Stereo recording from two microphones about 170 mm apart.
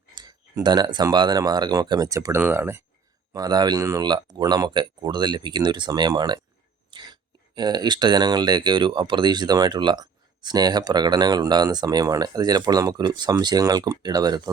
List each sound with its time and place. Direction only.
0.1 s speech: 25° right (ahead or behind)